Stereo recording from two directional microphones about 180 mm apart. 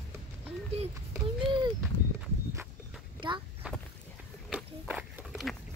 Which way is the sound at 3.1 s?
25° right (ahead or behind).